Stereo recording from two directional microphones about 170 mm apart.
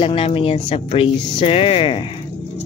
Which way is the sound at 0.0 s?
35° left (ahead or behind).